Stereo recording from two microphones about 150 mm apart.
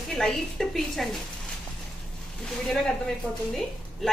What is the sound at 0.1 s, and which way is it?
Speech, 5° left (ahead or behind).